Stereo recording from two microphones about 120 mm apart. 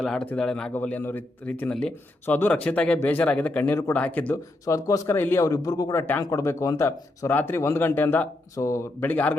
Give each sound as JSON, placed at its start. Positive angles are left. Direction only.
{"t": 0.0, "sound": "speech", "side_deg": 5}
{"t": 4.6, "sound": "speech", "side_deg": 30}